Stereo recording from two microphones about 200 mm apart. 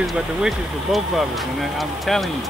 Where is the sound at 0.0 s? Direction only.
Centre (ahead or behind).